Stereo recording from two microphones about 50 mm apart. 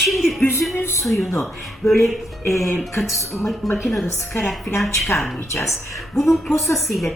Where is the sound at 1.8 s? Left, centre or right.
Left.